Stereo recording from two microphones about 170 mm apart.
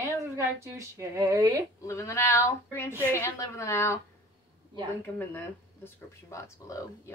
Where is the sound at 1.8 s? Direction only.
15° left (ahead or behind).